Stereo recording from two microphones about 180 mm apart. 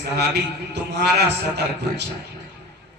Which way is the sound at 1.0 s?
65° right (ahead or behind).